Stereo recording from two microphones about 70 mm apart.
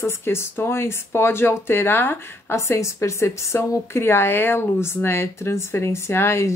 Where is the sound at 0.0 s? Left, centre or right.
Left.